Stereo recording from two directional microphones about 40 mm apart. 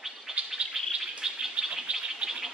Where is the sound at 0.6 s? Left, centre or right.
Right.